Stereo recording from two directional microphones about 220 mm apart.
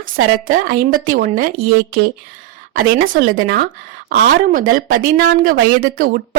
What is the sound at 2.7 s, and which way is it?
Speech, 40° right (ahead or behind).